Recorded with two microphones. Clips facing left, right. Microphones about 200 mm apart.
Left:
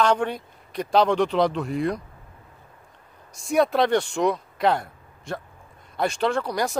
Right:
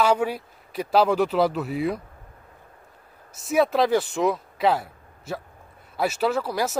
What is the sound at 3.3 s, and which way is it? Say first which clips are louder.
Speech: even; 5° right (ahead or behind).